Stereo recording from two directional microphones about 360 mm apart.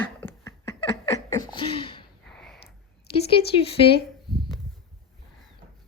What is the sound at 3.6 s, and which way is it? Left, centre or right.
Speech, centre.